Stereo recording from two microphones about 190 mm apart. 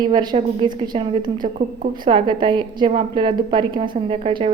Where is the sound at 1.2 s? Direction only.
45° right (ahead or behind).